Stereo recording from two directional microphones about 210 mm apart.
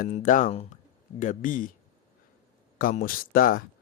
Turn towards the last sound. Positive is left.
turn(degrees=40)  # may be behind; listen again after turning